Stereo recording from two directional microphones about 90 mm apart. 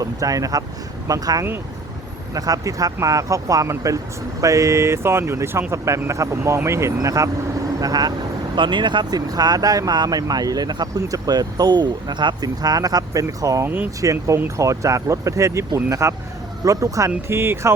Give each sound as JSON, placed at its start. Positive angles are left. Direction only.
{"t": 0.0, "sound": "speech", "side_deg": -40}
{"t": 8.5, "sound": "speech", "side_deg": -60}
{"t": 13.7, "sound": "speech", "side_deg": -20}
{"t": 14.0, "sound": "speech", "side_deg": -35}
{"t": 17.2, "sound": "speech", "side_deg": -25}